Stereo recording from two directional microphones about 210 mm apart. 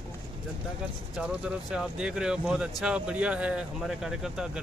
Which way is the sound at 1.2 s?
5° right (ahead or behind).